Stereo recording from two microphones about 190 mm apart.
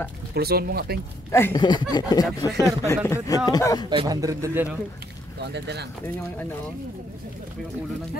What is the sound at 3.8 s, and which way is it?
Speech, 20° right (ahead or behind).